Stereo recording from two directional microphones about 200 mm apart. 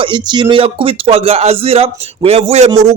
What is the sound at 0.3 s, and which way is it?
A man's voice, 25° right (ahead or behind).